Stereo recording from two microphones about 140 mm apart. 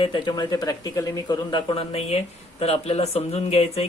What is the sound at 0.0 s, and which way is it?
Speech, 35° left (ahead or behind).